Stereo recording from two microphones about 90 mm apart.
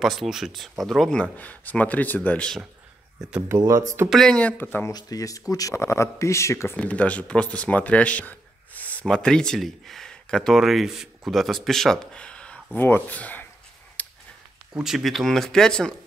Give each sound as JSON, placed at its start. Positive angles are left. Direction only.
{"t": 0.0, "sound": "speech", "side_deg": 0}
{"t": 1.3, "sound": "speech", "side_deg": 20}
{"t": 3.2, "sound": "speech", "side_deg": -10}
{"t": 3.4, "sound": "speech", "side_deg": -35}
{"t": 4.1, "sound": "speech", "side_deg": 5}
{"t": 4.4, "sound": "speech", "side_deg": 20}
{"t": 4.9, "sound": "speech", "side_deg": 40}
{"t": 6.8, "sound": "speech", "side_deg": 15}
{"t": 12.7, "sound": "speech", "side_deg": 20}
{"t": 14.0, "sound": "a sound", "side_deg": 20}
{"t": 14.7, "sound": "speech", "side_deg": -5}